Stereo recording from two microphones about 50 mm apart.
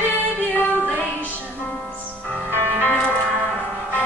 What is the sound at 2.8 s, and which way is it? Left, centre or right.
Music, left.